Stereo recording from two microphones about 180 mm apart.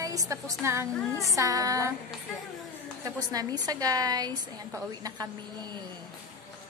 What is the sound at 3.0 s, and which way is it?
A woman's voice, 20° right (ahead or behind).